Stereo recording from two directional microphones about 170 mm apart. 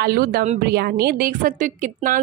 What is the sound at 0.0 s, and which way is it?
A woman's voice, 65° right (ahead or behind).